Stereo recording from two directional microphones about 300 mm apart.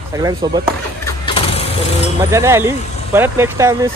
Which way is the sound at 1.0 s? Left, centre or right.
Centre.